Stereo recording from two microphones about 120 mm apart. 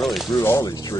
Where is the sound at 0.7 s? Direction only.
35° left (ahead or behind).